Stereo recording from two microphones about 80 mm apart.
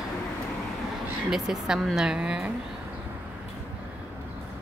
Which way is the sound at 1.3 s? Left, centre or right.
Centre.